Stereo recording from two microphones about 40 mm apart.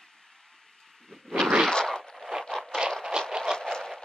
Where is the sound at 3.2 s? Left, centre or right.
Right.